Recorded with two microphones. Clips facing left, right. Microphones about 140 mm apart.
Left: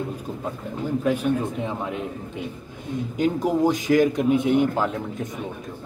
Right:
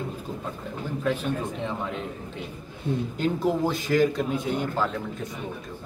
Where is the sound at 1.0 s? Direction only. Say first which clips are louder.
Left 4 dB; 10° left (ahead or behind).